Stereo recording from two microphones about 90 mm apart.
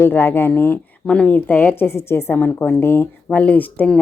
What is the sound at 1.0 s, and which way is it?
A woman's voice, 10° left (ahead or behind).